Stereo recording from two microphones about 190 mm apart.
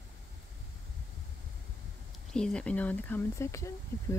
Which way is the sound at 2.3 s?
5° left (ahead or behind).